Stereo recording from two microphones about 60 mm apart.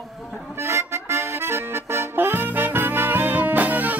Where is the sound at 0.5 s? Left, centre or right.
Right.